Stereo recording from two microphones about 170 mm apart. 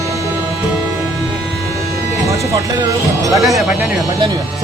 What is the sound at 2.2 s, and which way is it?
Music, 20° right (ahead or behind).